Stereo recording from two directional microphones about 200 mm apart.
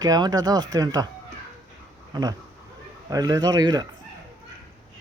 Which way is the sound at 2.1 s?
20° right (ahead or behind).